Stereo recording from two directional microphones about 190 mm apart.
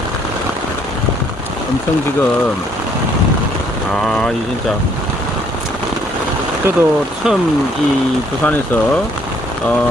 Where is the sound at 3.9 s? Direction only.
5° left (ahead or behind).